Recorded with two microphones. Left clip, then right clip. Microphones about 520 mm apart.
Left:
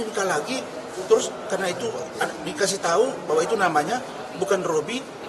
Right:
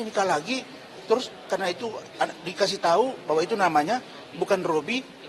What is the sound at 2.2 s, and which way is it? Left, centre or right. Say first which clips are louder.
Speech: right 1 dB; right.